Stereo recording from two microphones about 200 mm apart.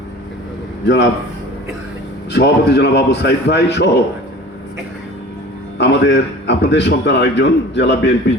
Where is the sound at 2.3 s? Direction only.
60° left (ahead or behind).